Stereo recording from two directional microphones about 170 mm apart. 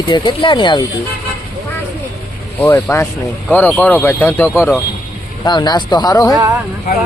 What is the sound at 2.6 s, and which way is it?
Speech, 10° left (ahead or behind).